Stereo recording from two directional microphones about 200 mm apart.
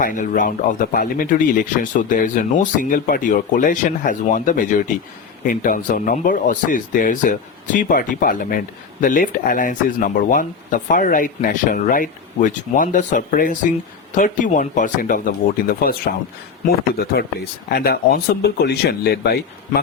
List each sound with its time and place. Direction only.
0.0 s speech: 40° left (ahead or behind)
17.7 s speech: 50° left (ahead or behind)